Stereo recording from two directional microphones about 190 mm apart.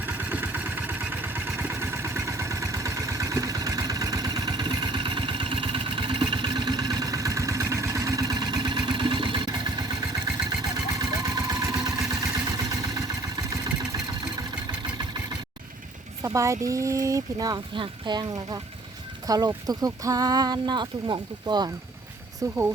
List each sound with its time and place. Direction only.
0.0 s vehicle: 10° right (ahead or behind)
16.2 s speech: 15° right (ahead or behind)